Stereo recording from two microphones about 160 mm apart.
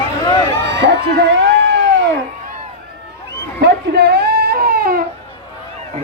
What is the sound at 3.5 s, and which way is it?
Baby cry, 85° right.